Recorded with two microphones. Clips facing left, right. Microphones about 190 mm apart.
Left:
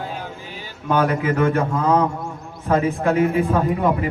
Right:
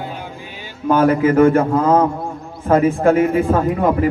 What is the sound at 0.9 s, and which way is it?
A man's voice, 45° right (ahead or behind).